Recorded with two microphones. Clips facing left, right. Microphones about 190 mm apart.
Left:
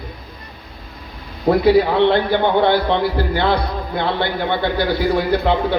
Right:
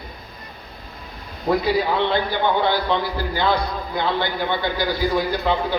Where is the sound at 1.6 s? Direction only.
65° left (ahead or behind).